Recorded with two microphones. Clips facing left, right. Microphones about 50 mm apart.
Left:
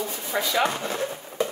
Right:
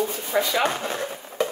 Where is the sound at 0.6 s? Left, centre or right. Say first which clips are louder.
Right 1 dB; right.